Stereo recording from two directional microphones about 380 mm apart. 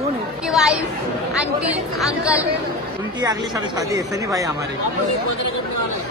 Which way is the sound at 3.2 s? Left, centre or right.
Centre.